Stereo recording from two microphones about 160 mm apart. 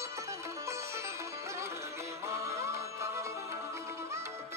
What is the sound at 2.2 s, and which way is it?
Music, 20° right (ahead or behind).